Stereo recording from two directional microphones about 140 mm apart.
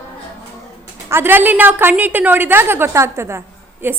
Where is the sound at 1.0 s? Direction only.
15° right (ahead or behind).